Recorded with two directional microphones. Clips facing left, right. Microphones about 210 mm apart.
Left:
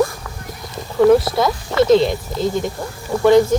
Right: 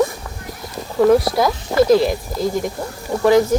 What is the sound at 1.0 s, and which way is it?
Speech, centre (ahead or behind).